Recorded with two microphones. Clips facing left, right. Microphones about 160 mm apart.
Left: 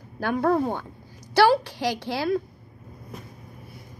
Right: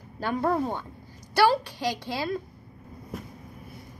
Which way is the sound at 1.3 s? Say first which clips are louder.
Left 3 dB; 90° left.